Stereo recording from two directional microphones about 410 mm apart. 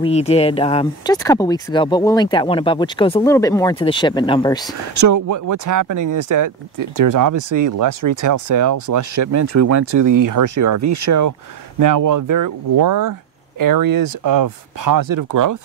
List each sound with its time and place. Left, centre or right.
0.0 s speech: centre
4.9 s speech: right